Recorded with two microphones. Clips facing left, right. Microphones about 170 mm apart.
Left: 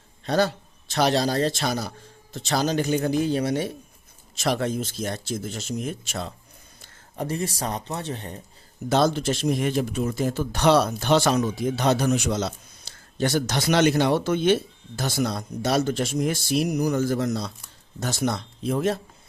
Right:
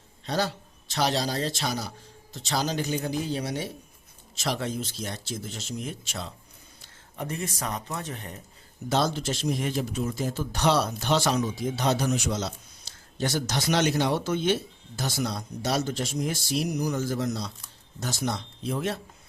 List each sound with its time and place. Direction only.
0.3 s speech: 55° left (ahead or behind)
7.2 s speech: 35° left (ahead or behind)
8.9 s speech: 55° left (ahead or behind)